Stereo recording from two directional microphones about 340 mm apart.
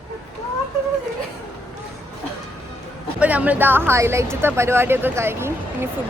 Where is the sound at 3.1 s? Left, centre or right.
Centre.